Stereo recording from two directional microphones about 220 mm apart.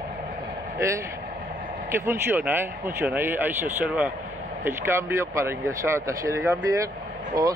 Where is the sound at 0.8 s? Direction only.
15° right (ahead or behind).